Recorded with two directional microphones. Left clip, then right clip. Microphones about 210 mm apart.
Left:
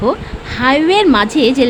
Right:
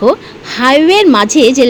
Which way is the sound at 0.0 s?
20° right (ahead or behind).